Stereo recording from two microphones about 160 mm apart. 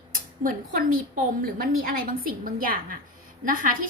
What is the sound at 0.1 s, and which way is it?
A woman's voice, 60° right (ahead or behind).